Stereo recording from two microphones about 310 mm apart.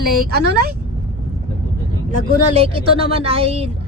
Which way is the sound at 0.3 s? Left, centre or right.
Right.